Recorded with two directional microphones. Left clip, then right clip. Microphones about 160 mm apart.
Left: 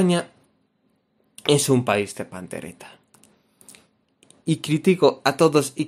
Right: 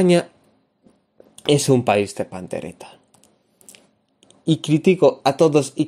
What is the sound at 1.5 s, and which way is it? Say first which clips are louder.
Speech: right 3 dB; 15° right (ahead or behind).